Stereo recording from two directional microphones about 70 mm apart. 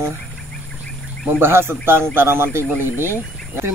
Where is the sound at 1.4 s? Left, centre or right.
Right.